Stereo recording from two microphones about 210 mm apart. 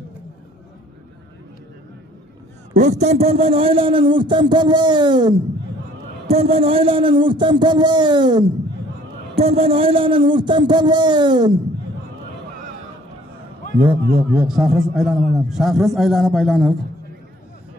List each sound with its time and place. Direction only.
2.7 s a man's voice: 35° right (ahead or behind)
13.7 s a man's voice: 10° right (ahead or behind)